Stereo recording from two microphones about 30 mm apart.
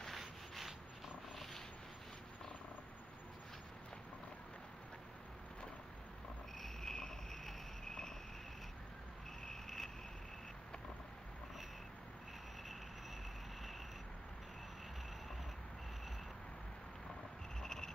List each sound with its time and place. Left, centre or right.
0.2 s rub: centre
1.3 s purr: centre
6.8 s cricket: centre
9.5 s vehicle: centre
17.6 s a sound: centre